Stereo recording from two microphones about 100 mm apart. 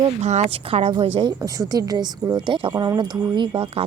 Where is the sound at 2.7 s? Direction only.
45° right (ahead or behind).